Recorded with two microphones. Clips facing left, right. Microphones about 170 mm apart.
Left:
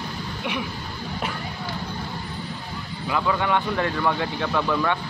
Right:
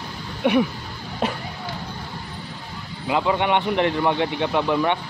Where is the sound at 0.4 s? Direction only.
50° right (ahead or behind).